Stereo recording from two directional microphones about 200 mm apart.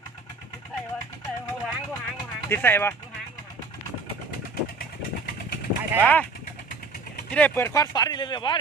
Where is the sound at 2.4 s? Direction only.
10° left (ahead or behind).